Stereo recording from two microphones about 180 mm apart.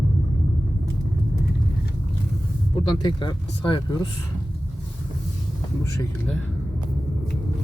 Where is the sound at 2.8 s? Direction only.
25° left (ahead or behind).